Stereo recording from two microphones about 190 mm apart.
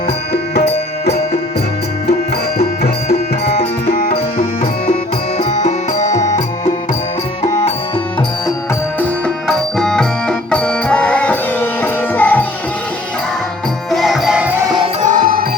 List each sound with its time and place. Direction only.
0.5 s music: 60° left (ahead or behind)
2.6 s music: 55° left (ahead or behind)
3.4 s music: 35° left (ahead or behind)
3.8 s music: 55° left (ahead or behind)
4.4 s music: 30° left (ahead or behind)
9.0 s music: 5° left (ahead or behind)
13.9 s music: centre (ahead or behind)
15.0 s music: 45° right (ahead or behind)